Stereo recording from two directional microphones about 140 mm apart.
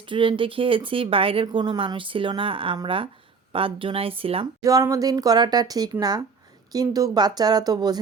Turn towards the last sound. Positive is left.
turn(degrees=-30)  # may be behind; listen again after turning